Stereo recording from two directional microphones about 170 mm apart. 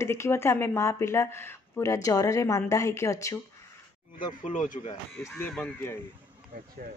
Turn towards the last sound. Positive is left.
turn(degrees=5)  # may be behind; listen again after turning